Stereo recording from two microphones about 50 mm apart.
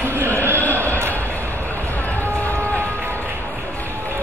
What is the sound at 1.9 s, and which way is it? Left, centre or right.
Run, left.